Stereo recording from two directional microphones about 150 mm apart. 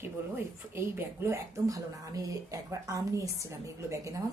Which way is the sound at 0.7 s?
15° right (ahead or behind).